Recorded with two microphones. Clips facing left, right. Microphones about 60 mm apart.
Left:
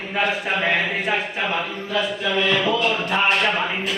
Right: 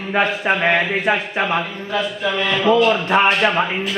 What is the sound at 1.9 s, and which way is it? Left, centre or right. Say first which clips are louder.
A man's voice: right 2 dB; right.